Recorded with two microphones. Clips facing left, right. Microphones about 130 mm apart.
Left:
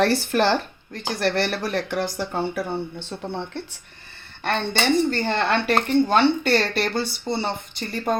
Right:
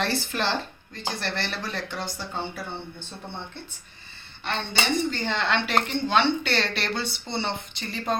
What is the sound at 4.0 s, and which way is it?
Speech, 55° left (ahead or behind).